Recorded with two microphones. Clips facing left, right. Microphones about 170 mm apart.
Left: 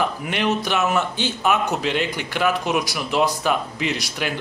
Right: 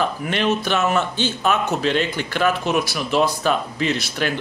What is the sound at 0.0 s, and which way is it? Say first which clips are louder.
A man's voice: right 1 dB; 15° left (ahead or behind).